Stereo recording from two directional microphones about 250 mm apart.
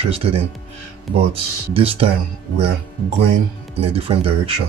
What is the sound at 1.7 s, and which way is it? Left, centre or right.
Speech, right.